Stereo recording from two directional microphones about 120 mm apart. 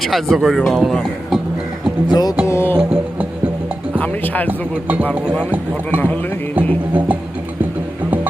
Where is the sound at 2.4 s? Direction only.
20° left (ahead or behind).